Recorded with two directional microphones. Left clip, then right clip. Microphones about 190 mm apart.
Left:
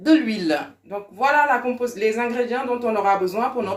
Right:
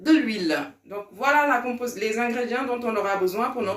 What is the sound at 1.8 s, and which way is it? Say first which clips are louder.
A man's voice: left 4 dB; 45° left (ahead or behind).